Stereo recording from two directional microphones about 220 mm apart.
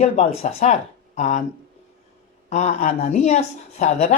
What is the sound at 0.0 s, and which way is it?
A woman's voice, 30° left (ahead or behind).